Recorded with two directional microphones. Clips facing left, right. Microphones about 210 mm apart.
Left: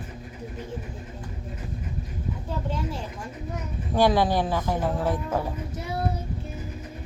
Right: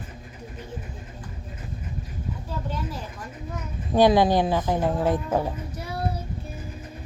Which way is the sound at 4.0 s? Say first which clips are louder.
Right 3 dB; 20° right (ahead or behind).